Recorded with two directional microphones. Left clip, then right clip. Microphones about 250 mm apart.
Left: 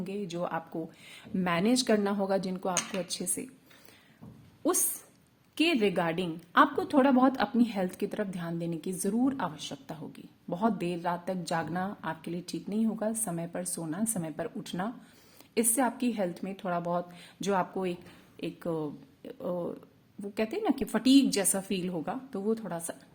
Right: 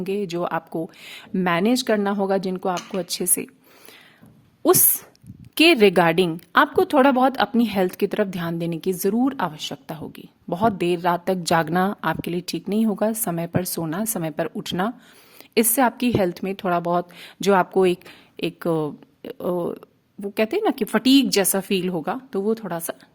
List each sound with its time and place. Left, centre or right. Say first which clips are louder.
0.0 s a woman's voice: right 10 dB; right
5.5 s a woman's voice: right 12 dB; right